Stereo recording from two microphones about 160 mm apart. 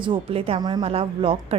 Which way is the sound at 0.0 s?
35° right (ahead or behind).